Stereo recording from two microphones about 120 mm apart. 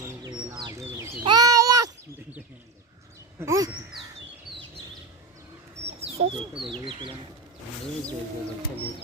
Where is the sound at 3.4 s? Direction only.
30° right (ahead or behind).